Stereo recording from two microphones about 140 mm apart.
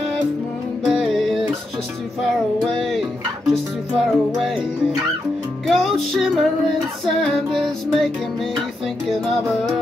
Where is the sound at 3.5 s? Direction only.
Centre (ahead or behind).